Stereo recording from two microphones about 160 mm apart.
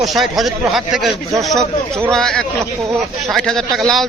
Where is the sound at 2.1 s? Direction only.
5° left (ahead or behind).